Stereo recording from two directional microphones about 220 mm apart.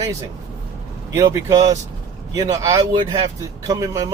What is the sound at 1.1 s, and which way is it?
Speech, 15° right (ahead or behind).